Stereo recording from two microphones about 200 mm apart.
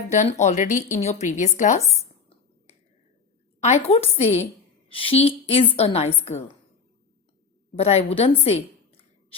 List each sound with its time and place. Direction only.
0.1 s a woman's voice: 35° left (ahead or behind)
3.6 s a woman's voice: 30° left (ahead or behind)
7.8 s a woman's voice: 30° left (ahead or behind)